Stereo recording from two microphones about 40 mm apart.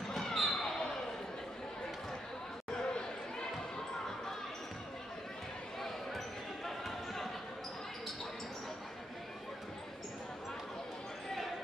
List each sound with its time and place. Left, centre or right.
0.1 s basketball bounce: centre
2.7 s a sound: left
5.8 s basketball bounce: centre